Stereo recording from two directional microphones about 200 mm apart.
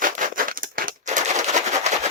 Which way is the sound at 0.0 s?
45° right (ahead or behind).